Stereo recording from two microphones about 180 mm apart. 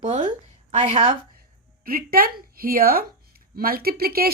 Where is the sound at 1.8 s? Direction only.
55° right (ahead or behind).